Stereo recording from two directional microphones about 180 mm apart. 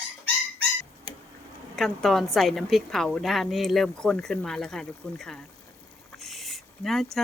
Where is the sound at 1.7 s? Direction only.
Centre (ahead or behind).